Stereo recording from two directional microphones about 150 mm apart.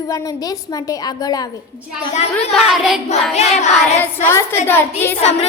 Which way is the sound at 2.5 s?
Centre (ahead or behind).